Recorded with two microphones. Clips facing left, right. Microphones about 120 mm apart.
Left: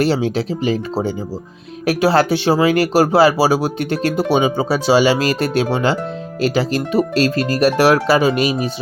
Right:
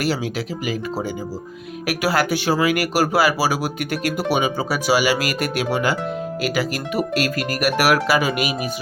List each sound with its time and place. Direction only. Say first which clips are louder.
0.0 s speech: left 6 dB; 30° left (ahead or behind)